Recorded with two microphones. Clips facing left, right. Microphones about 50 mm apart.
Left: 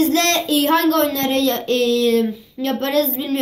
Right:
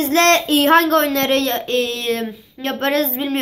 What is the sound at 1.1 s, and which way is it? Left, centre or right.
Speech, right.